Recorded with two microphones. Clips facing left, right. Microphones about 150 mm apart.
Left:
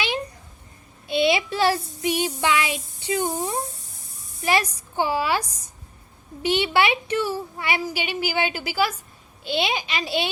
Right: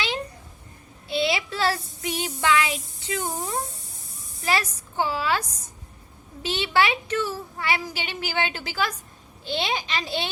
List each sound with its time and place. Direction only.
1.0 s a woman's voice: 20° left (ahead or behind)